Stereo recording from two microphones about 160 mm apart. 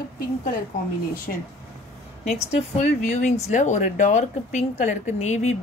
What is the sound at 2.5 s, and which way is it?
A woman's voice, 45° left (ahead or behind).